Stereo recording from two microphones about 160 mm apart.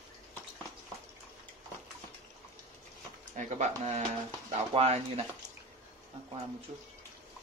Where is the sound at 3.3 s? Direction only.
50° right (ahead or behind).